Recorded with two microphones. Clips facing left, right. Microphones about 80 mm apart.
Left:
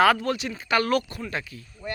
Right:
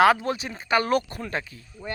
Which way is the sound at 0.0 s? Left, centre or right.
Centre.